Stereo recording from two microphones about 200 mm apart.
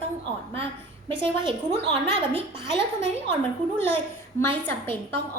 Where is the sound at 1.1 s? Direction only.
25° right (ahead or behind).